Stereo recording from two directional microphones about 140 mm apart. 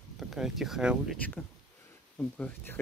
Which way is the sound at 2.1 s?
10° left (ahead or behind).